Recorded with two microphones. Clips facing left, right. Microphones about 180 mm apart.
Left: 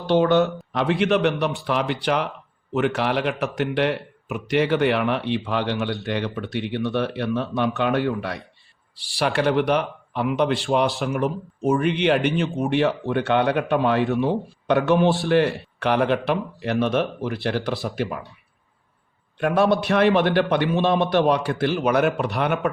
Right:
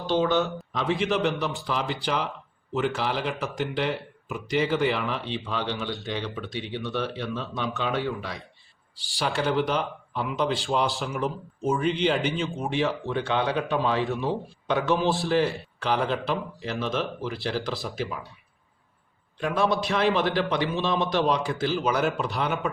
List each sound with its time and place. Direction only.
0.0 s speech: 65° left (ahead or behind)
19.8 s speech: 60° left (ahead or behind)